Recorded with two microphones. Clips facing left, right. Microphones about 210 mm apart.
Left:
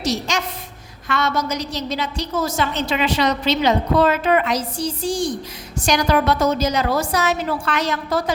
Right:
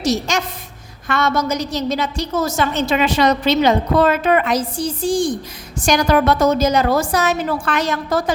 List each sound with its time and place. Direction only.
0.0 s a woman's voice: 50° right (ahead or behind)